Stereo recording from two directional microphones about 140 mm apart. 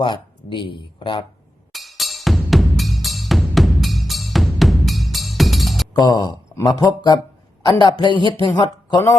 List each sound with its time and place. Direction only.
0.0 s speech: 35° left (ahead or behind)
1.7 s music: centre (ahead or behind)
5.9 s a man's voice: 30° left (ahead or behind)